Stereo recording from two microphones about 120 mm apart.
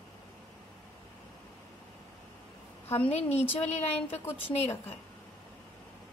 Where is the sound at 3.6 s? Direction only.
65° left (ahead or behind).